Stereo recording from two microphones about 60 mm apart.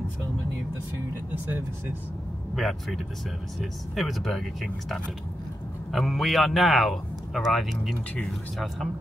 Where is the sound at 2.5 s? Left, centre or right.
Centre.